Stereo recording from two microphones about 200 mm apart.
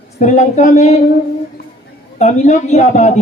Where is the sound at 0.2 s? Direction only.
40° left (ahead or behind).